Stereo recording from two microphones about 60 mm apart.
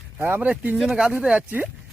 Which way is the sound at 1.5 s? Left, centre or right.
Right.